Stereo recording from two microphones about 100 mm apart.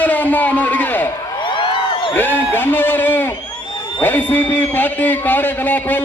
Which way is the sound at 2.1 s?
20° left (ahead or behind).